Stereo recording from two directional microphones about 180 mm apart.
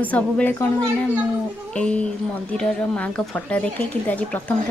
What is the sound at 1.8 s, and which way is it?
Speech, 5° left (ahead or behind).